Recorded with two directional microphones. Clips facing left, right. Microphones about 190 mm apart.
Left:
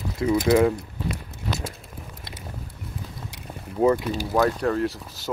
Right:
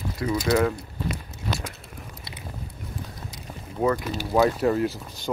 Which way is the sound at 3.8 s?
25° left (ahead or behind).